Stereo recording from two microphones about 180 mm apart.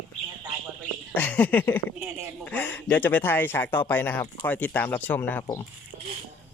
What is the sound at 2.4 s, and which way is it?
Speech, 10° left (ahead or behind).